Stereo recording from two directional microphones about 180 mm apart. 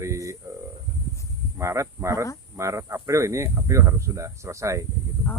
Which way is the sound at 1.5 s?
15° right (ahead or behind).